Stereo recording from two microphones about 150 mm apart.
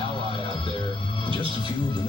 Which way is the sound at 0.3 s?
30° left (ahead or behind).